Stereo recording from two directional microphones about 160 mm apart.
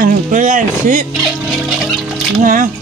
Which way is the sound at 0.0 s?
55° right (ahead or behind).